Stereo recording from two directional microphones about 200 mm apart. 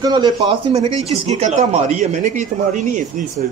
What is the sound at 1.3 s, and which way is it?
Speech, 35° right (ahead or behind).